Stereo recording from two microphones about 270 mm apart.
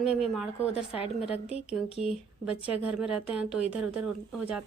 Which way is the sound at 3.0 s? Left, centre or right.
Centre.